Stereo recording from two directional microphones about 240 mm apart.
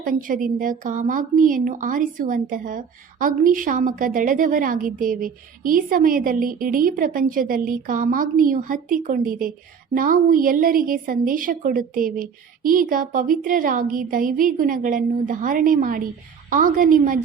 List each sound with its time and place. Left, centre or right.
0.0 s a woman's voice: right